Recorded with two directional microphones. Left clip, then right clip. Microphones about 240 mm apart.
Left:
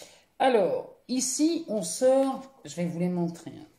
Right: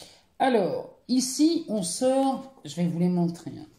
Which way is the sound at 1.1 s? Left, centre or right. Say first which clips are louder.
Right 3 dB; centre.